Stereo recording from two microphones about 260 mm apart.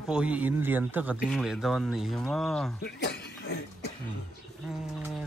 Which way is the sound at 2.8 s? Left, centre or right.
Left.